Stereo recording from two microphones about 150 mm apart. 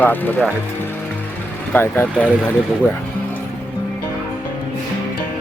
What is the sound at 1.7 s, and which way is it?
Speech, 15° left (ahead or behind).